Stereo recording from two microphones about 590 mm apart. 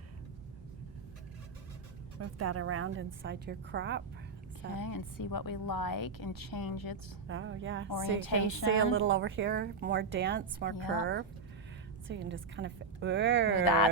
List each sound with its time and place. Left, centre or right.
2.1 s a woman's voice: right
4.8 s a woman's voice: left
7.3 s a woman's voice: centre
7.9 s a woman's voice: left
8.9 s a woman's voice: centre